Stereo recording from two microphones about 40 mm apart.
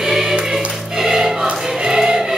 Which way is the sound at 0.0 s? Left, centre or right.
Centre.